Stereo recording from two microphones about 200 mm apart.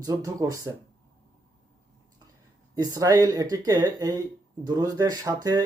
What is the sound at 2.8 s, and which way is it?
Speech, 20° right (ahead or behind).